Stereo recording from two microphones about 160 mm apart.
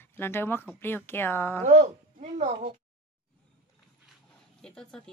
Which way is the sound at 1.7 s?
45° right (ahead or behind).